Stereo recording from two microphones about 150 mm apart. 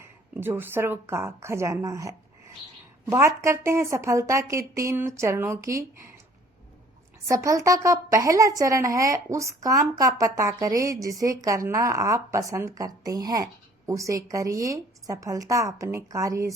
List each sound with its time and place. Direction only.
0.0 s speech: 15° right (ahead or behind)
7.3 s speech: 20° right (ahead or behind)